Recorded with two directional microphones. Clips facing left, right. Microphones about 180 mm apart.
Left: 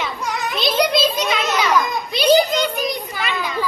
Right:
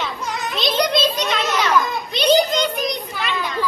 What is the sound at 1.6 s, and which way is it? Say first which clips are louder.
Children playing: even; 15° left (ahead or behind).